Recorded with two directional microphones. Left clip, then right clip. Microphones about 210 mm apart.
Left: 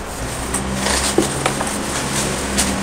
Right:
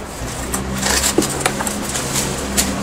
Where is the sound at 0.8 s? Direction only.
30° right (ahead or behind).